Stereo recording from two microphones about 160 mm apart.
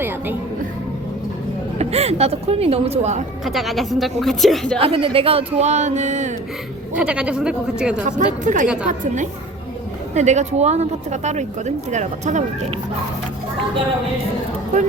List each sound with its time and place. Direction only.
1.8 s speech: 40° right (ahead or behind)
3.4 s a woman's voice: centre (ahead or behind)
4.8 s speech: 35° right (ahead or behind)
6.9 s a woman's voice: 5° right (ahead or behind)
8.0 s speech: 55° right (ahead or behind)
8.6 s a woman's voice: 5° right (ahead or behind)
8.9 s speech: 50° right (ahead or behind)